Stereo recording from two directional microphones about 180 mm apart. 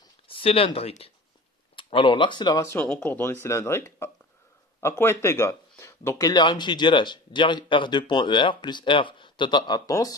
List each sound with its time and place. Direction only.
0.3 s speech: 30° left (ahead or behind)
2.8 s a man's voice: 5° left (ahead or behind)